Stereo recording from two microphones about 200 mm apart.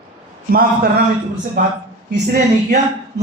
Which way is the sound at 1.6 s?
45° right (ahead or behind).